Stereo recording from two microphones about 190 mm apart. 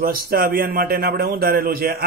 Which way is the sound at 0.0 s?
50° right (ahead or behind).